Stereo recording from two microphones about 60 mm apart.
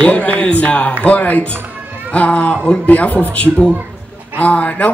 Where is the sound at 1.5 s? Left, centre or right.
Right.